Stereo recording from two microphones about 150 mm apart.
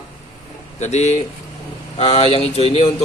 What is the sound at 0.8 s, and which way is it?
Speech, 50° left (ahead or behind).